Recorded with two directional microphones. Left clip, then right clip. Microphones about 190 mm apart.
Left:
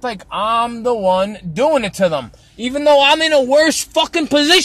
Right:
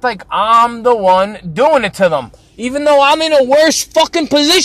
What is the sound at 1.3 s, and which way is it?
A man's voice, 15° left (ahead or behind).